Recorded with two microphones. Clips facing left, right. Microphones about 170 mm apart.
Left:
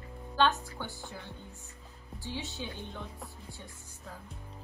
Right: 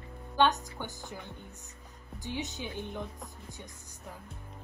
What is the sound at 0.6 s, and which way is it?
A woman's voice, 20° right (ahead or behind).